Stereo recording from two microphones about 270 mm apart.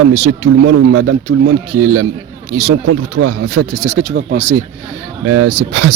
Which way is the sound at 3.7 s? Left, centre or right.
Right.